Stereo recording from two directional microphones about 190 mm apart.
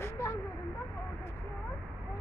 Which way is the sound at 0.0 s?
15° left (ahead or behind).